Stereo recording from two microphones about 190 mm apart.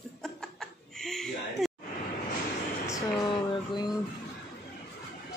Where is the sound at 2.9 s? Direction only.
25° left (ahead or behind).